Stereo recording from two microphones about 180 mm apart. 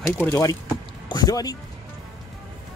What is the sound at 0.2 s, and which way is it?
Speech, 15° left (ahead or behind).